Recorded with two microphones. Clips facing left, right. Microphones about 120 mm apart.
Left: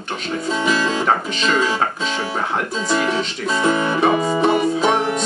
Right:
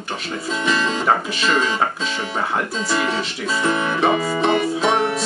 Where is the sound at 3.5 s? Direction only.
20° left (ahead or behind).